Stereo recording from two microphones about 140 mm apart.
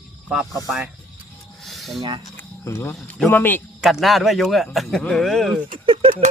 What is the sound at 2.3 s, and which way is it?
Speech, 15° left (ahead or behind).